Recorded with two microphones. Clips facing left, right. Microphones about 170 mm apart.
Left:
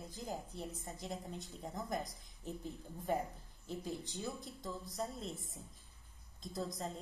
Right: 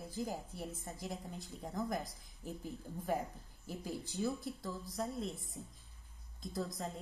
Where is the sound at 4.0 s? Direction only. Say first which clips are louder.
Right 6 dB; 15° left (ahead or behind).